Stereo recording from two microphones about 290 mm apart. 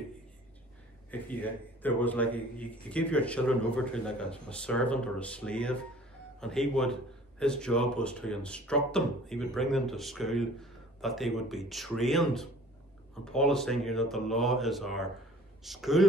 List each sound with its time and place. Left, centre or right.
1.1 s a man's voice: centre